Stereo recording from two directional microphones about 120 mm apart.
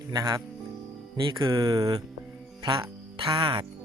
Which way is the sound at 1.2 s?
40° right (ahead or behind).